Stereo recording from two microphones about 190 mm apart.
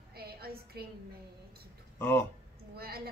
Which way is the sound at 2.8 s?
55° right (ahead or behind).